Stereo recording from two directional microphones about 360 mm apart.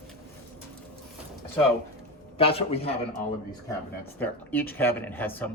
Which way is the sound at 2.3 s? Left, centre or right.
Centre.